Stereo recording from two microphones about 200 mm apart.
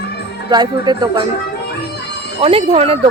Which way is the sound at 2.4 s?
30° right (ahead or behind).